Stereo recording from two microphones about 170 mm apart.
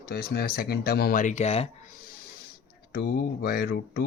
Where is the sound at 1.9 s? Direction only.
55° left (ahead or behind).